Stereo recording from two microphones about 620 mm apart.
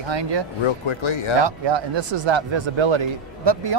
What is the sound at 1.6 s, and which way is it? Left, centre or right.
Speech, right.